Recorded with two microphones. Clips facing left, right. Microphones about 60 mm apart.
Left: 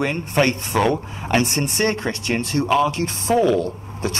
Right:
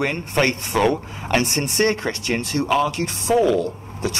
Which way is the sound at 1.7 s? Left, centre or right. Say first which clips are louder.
Right 1 dB; left.